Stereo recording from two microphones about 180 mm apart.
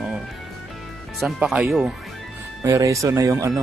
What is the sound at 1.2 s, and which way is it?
Speech, centre (ahead or behind).